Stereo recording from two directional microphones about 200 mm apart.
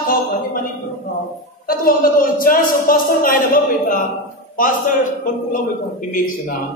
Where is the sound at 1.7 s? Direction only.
45° left (ahead or behind).